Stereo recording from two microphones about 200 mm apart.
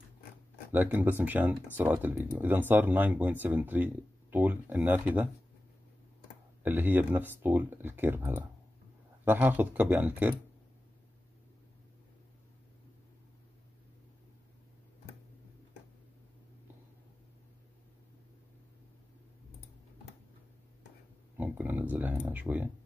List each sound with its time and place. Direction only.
0.7 s speech: 10° right (ahead or behind)
6.6 s speech: 10° right (ahead or behind)
21.4 s a sound: 10° right (ahead or behind)